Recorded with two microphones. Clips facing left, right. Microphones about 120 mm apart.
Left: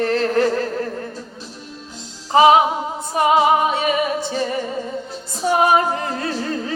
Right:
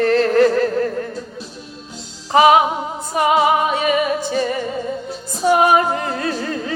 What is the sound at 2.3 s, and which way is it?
Music, 25° left (ahead or behind).